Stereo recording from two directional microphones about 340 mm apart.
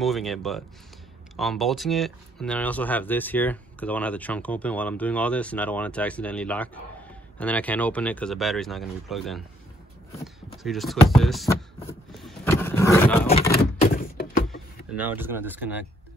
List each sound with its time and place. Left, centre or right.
0.0 s speech: centre
10.2 s a sound: centre
13.3 s door: left
14.5 s speech: centre